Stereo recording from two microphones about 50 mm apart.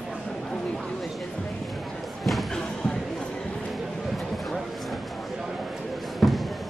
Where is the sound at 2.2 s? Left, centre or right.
Centre.